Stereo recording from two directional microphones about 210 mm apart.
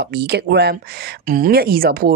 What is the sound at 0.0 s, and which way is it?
Speech, 50° right (ahead or behind).